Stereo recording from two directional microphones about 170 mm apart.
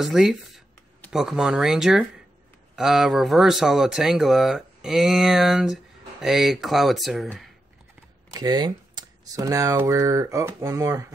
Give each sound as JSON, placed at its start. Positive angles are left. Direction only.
{"t": 0.0, "sound": "speech", "side_deg": 0}
{"t": 8.4, "sound": "speech", "side_deg": -25}